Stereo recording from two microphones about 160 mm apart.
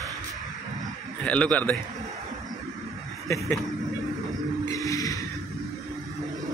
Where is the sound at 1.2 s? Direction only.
10° left (ahead or behind).